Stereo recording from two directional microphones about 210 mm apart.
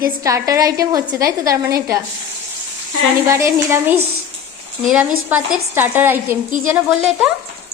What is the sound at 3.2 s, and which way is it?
Speech, 15° right (ahead or behind).